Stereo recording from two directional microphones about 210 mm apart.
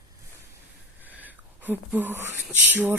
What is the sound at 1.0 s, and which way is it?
A woman's voice, 10° right (ahead or behind).